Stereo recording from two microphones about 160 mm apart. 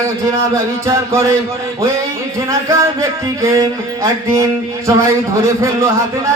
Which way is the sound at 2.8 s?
20° right (ahead or behind).